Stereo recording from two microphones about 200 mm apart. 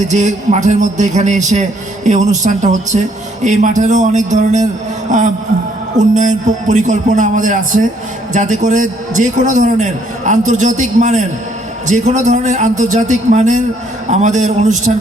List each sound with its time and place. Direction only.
0.1 s a man's voice: 35° right (ahead or behind)